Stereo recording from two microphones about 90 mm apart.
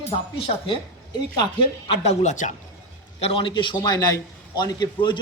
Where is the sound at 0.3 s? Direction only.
90° left.